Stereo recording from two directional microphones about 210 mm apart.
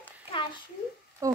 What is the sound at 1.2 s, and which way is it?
Speech, 15° right (ahead or behind).